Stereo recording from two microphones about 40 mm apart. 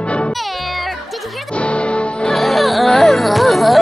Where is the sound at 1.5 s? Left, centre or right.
Left.